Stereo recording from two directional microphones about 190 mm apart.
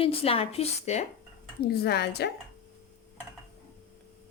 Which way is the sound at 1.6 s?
55° left (ahead or behind).